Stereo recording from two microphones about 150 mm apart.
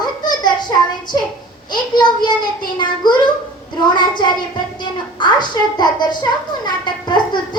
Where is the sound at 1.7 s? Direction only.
30° left (ahead or behind).